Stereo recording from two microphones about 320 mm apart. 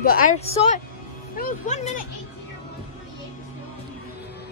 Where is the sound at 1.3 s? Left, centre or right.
Left.